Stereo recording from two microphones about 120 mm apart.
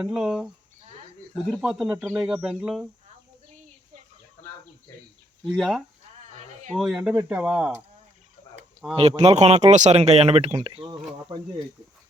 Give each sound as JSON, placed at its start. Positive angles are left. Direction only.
{"t": 0.0, "sound": "speech", "side_deg": -5}
{"t": 1.6, "sound": "speech", "side_deg": -5}
{"t": 5.5, "sound": "speech", "side_deg": 0}
{"t": 9.0, "sound": "speech", "side_deg": -60}
{"t": 10.5, "sound": "speech", "side_deg": -45}